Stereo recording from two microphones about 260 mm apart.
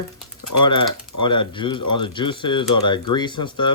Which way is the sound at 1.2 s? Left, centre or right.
Centre.